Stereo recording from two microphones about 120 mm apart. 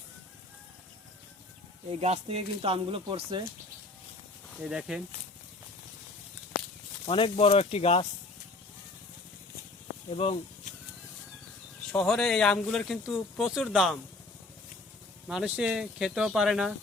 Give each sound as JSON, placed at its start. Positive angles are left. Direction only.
{"t": 2.0, "sound": "speech", "side_deg": -60}
{"t": 4.6, "sound": "speech", "side_deg": -5}
{"t": 7.0, "sound": "speech", "side_deg": 50}
{"t": 10.1, "sound": "speech", "side_deg": 55}
{"t": 11.9, "sound": "speech", "side_deg": 5}
{"t": 15.3, "sound": "speech", "side_deg": -5}